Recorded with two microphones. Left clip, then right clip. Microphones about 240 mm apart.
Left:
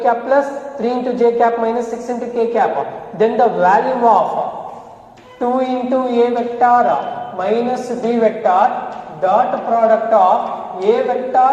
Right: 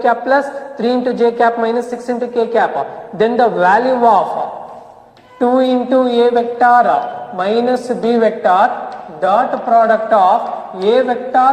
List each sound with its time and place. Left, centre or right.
0.0 s a man's voice: right
5.4 s a man's voice: right